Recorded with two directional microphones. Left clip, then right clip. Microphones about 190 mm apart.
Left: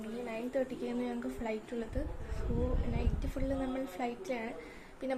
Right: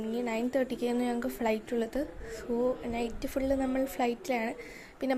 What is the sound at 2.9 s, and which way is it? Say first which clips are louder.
Speech: right 7 dB; 40° right (ahead or behind).